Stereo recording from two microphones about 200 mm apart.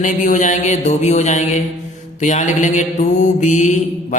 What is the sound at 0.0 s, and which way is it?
Mantra, 40° left (ahead or behind).